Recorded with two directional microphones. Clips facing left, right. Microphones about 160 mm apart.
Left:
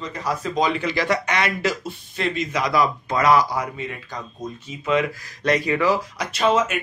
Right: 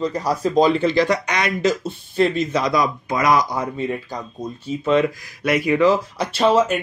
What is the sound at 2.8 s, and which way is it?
Speech, 15° right (ahead or behind).